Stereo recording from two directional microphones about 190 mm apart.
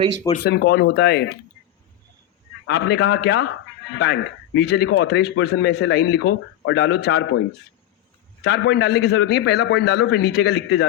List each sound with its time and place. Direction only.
0.3 s speech: 60° left (ahead or behind)
2.6 s speech: 65° left (ahead or behind)
8.4 s speech: 65° left (ahead or behind)